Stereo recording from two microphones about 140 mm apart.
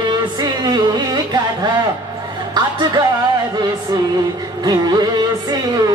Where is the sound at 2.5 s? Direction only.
30° right (ahead or behind).